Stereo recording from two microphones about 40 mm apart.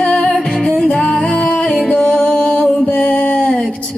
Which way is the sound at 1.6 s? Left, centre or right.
Centre.